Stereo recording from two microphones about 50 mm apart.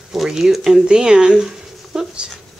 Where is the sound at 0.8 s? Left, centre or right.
Centre.